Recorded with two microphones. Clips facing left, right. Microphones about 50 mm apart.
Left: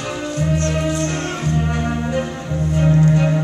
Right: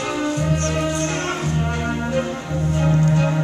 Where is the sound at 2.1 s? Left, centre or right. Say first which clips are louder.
Even; centre.